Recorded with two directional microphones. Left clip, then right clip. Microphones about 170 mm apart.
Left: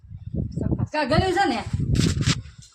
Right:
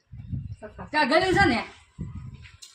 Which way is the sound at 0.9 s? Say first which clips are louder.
Right 1 dB; 50° right (ahead or behind).